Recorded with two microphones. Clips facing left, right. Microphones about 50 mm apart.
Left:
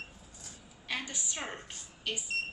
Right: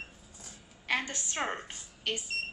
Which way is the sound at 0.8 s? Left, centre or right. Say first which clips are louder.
Right 5 dB; right.